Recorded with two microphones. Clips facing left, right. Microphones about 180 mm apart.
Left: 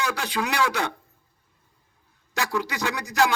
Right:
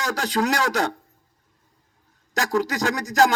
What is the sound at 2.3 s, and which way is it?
Speech, 40° right (ahead or behind).